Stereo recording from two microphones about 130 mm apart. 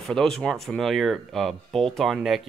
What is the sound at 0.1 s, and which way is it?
Speech, 5° left (ahead or behind).